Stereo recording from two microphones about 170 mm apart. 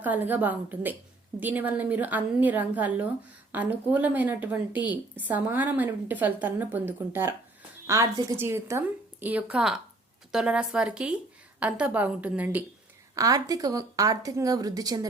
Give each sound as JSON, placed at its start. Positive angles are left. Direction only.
{"t": 0.0, "sound": "a woman's voice", "side_deg": -10}
{"t": 13.1, "sound": "a woman's voice", "side_deg": -20}